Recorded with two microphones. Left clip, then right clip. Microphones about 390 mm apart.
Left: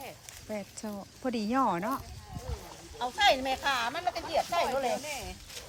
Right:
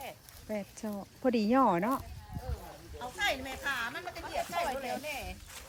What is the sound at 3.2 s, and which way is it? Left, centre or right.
A woman's voice, centre.